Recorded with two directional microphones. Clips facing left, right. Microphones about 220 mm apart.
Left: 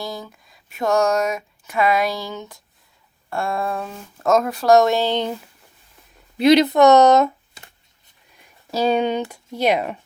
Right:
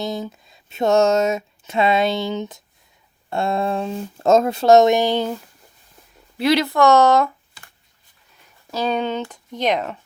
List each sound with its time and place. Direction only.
0.0 s speech: 20° right (ahead or behind)
6.3 s speech: 20° left (ahead or behind)
8.7 s speech: 10° left (ahead or behind)